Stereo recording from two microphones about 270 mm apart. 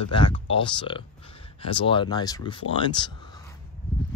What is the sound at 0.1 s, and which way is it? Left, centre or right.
Speech, centre.